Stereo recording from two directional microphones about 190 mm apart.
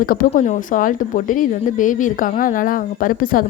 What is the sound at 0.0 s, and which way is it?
Speech, 50° left (ahead or behind).